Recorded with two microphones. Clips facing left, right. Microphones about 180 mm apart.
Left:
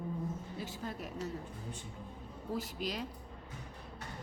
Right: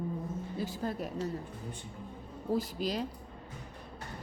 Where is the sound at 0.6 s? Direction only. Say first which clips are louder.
Right 7 dB; 35° right (ahead or behind).